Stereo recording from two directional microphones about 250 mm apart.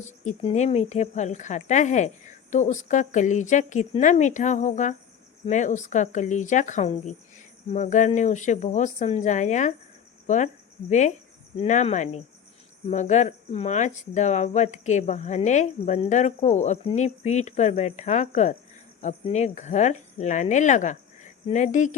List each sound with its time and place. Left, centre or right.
0.3 s speech: left